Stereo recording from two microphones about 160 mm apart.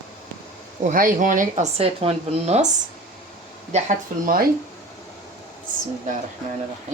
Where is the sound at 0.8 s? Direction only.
60° right (ahead or behind); by 2.7 s 40° right (ahead or behind).